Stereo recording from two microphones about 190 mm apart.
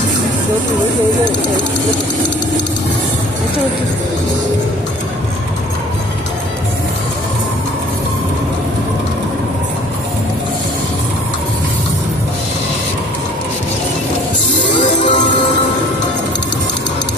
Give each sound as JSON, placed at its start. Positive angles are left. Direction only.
{"t": 14.8, "sound": "music", "side_deg": 40}